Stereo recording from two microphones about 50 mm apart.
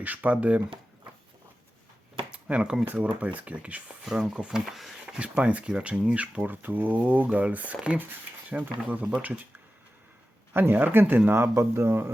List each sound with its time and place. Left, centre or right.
0.0 s speech: right
2.3 s a sound: right
2.8 s speech: right
4.4 s speech: centre
4.6 s speech: centre
5.0 s speech: right
6.5 s speech: right
7.9 s speech: right
8.4 s speech: right
10.5 s speech: right
11.5 s speech: right